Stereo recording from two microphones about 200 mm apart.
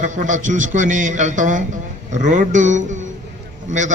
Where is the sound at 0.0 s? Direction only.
40° right (ahead or behind).